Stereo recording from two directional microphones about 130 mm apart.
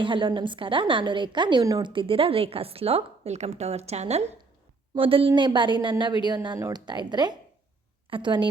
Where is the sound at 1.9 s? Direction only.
40° right (ahead or behind).